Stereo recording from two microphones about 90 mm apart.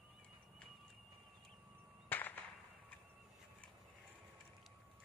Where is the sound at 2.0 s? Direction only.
20° left (ahead or behind).